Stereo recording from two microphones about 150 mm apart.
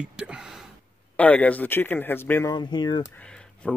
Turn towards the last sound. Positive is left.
turn(degrees=5)  # may be behind; listen again after turning